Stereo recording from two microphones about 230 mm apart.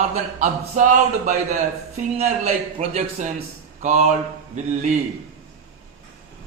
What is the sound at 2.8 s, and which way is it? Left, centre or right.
A man's voice, right.